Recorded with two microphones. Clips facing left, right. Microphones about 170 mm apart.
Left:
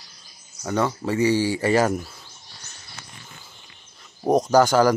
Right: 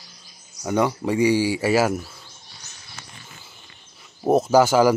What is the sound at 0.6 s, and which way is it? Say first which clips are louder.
Speech: right 2 dB; 15° right (ahead or behind).